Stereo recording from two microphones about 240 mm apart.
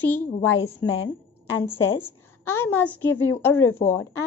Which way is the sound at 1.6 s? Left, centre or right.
Centre.